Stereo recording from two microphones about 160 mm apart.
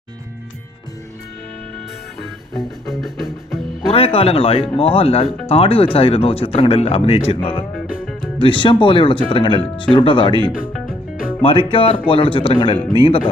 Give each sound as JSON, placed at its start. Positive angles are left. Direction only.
{"t": 2.6, "sound": "music", "side_deg": 0}
{"t": 3.8, "sound": "speech", "side_deg": 35}
{"t": 8.4, "sound": "speech", "side_deg": 30}
{"t": 11.4, "sound": "speech", "side_deg": 35}